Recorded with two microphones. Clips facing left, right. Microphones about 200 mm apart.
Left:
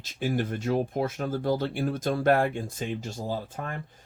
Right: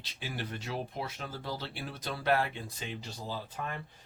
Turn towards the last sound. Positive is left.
turn(degrees=45)  # may be behind; listen again after turning